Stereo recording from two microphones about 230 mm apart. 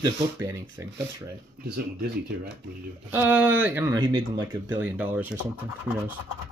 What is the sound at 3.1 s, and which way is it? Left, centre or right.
Speech, centre.